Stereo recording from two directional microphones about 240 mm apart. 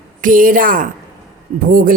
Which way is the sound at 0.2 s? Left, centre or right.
Right.